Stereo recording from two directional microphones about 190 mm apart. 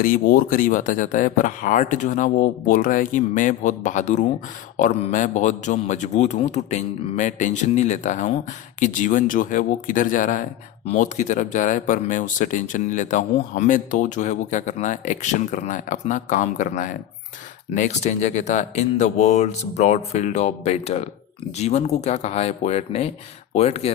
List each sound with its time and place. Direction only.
0.0 s speech: 50° left (ahead or behind); by 23.9 s 35° left (ahead or behind)